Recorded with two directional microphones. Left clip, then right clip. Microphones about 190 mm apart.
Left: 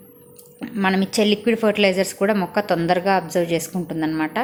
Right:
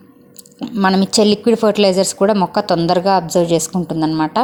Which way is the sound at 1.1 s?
30° right (ahead or behind).